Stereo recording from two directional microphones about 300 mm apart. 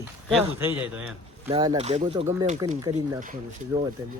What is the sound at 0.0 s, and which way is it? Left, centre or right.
Speech, centre.